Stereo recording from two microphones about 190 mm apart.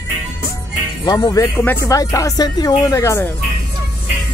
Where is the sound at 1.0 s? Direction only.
20° left (ahead or behind).